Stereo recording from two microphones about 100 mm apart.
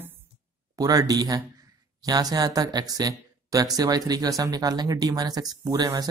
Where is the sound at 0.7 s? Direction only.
40° right (ahead or behind).